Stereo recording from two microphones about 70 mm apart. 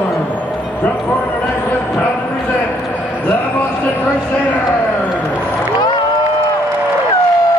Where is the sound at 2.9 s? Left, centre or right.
Left.